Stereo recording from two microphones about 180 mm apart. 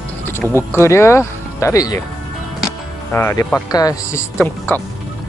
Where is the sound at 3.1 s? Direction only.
15° left (ahead or behind).